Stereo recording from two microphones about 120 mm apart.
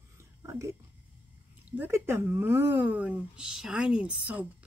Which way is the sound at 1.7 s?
20° right (ahead or behind).